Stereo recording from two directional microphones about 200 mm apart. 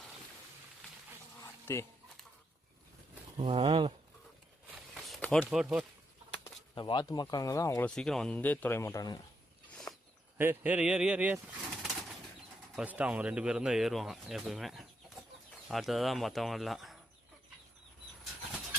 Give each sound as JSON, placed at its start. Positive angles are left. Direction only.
{"t": 1.7, "sound": "speech", "side_deg": 15}
{"t": 3.3, "sound": "speech", "side_deg": -25}
{"t": 4.7, "sound": "a sound", "side_deg": 0}
{"t": 6.7, "sound": "speech", "side_deg": 20}
{"t": 7.9, "sound": "speech", "side_deg": 5}
{"t": 9.9, "sound": "a sound", "side_deg": 10}
{"t": 10.3, "sound": "speech", "side_deg": -10}
{"t": 11.8, "sound": "bird", "side_deg": 0}
{"t": 12.7, "sound": "speech", "side_deg": -5}